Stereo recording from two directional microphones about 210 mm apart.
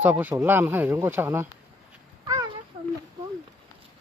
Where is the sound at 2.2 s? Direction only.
20° right (ahead or behind).